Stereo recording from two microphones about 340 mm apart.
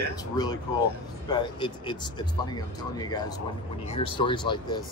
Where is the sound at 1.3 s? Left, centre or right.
Centre.